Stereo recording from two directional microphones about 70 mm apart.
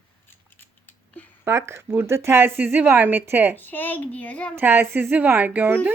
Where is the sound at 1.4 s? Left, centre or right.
Right.